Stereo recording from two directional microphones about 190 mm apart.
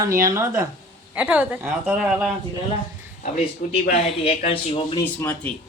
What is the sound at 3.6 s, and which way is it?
Speech, 45° left (ahead or behind).